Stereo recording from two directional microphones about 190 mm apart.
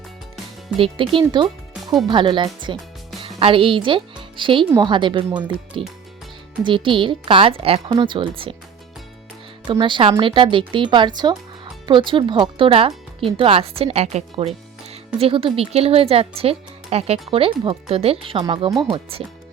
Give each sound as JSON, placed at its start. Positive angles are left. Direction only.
{"t": 0.8, "sound": "a woman's voice", "side_deg": -30}
{"t": 9.6, "sound": "a woman's voice", "side_deg": -25}